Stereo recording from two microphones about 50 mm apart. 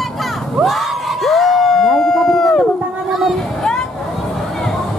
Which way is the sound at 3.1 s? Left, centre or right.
Centre.